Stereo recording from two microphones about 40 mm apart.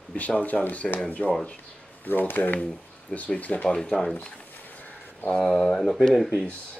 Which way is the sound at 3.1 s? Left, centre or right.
Left.